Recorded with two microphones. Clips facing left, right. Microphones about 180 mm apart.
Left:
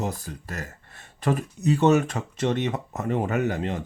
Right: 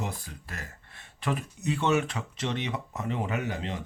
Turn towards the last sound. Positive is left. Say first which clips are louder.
# left 7 dB
turn(degrees=50)  # may be behind; listen again after turning